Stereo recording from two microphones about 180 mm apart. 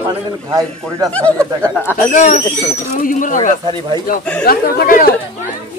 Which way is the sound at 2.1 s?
40° left (ahead or behind).